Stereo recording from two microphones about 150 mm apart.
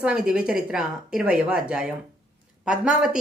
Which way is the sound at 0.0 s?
5° right (ahead or behind).